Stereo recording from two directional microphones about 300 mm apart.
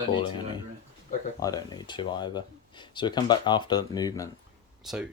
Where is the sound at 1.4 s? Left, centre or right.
Centre.